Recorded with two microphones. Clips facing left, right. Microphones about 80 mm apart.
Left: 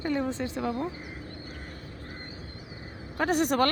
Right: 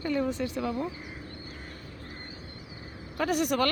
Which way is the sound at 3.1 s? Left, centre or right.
Left.